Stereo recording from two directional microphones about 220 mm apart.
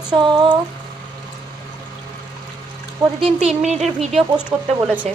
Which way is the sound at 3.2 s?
30° right (ahead or behind).